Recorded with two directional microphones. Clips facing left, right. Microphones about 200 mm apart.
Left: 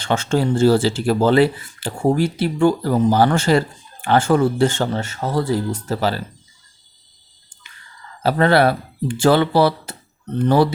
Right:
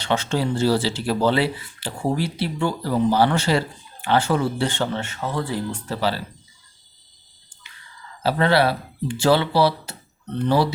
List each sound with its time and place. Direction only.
0.0 s speech: 50° left (ahead or behind)
8.2 s speech: 50° left (ahead or behind)